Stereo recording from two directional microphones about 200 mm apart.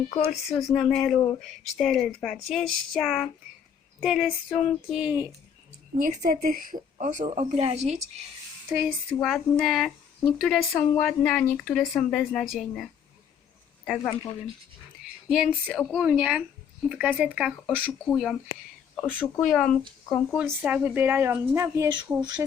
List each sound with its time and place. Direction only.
0.4 s speech: 5° left (ahead or behind)
6.0 s a woman's voice: 40° right (ahead or behind)
8.8 s speech: centre (ahead or behind)
15.3 s speech: 5° right (ahead or behind)
18.0 s speech: 5° left (ahead or behind); by 22.4 s 20° right (ahead or behind)